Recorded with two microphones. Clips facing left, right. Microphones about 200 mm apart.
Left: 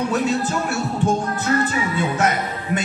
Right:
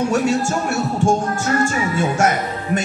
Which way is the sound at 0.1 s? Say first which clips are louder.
Right 3 dB; 45° right (ahead or behind).